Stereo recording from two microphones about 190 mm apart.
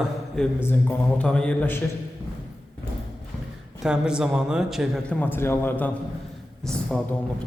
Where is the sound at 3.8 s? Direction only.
5° right (ahead or behind).